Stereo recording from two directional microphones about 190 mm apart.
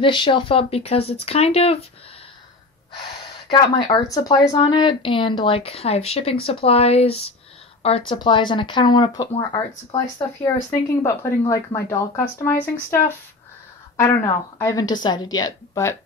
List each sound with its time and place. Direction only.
0.0 s a woman's voice: 25° left (ahead or behind)
3.4 s a woman's voice: 25° left (ahead or behind)
13.9 s a woman's voice: 15° left (ahead or behind)